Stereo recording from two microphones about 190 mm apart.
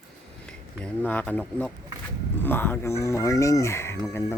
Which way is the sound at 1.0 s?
5° left (ahead or behind).